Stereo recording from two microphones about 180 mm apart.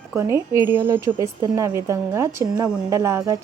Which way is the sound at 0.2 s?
15° right (ahead or behind).